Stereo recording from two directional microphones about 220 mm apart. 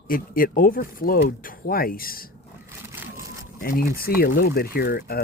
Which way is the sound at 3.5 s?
40° left (ahead or behind).